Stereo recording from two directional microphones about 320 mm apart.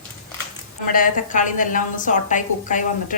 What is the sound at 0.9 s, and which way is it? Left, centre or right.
A woman's voice, left.